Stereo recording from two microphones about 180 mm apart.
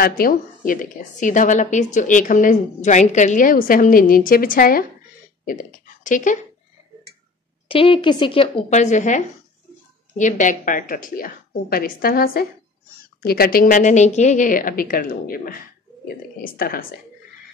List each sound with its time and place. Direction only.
0.0 s a woman's voice: 55° left (ahead or behind)
7.6 s a woman's voice: 30° left (ahead or behind); by 16.8 s 55° left (ahead or behind)